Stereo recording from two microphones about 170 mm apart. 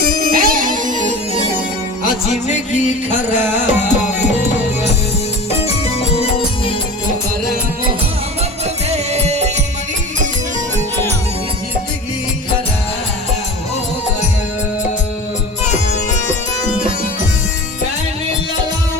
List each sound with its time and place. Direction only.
0.1 s music: 60° right (ahead or behind)
2.5 s music: 45° left (ahead or behind)
5.6 s music: 35° left (ahead or behind)
8.6 s music: 40° right (ahead or behind)